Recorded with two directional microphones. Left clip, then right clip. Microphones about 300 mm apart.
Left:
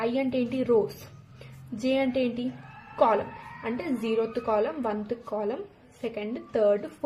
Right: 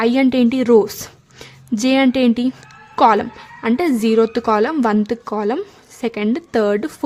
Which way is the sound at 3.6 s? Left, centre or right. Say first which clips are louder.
Right 13 dB; right.